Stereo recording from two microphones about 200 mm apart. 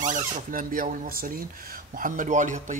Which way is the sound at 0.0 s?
40° right (ahead or behind).